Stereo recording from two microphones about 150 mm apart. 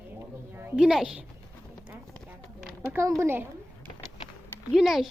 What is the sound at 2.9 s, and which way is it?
Speech, 20° right (ahead or behind).